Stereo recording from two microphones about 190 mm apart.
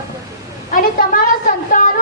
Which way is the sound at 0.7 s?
45° left (ahead or behind).